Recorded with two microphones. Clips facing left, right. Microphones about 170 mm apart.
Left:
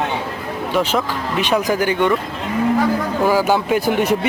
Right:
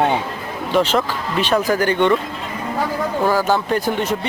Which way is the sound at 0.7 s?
10° left (ahead or behind).